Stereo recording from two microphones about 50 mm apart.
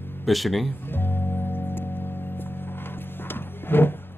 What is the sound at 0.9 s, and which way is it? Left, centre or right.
Music, left.